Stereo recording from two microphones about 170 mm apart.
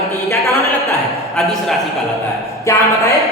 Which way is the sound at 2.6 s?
15° left (ahead or behind).